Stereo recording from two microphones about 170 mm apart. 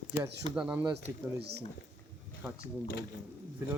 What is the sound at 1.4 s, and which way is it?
Speech, 70° right (ahead or behind).